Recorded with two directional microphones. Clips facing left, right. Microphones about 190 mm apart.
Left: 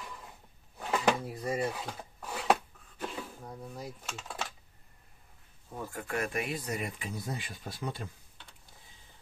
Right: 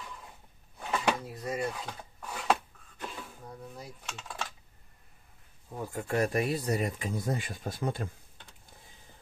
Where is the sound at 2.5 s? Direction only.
5° left (ahead or behind).